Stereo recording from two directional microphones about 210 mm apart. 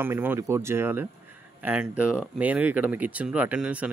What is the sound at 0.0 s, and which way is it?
Speech, 10° right (ahead or behind).